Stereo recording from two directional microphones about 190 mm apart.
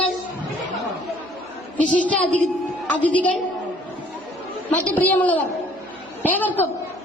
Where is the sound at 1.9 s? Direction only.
5° left (ahead or behind).